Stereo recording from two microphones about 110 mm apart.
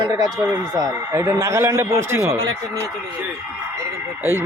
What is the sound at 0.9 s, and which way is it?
Speech, 20° right (ahead or behind).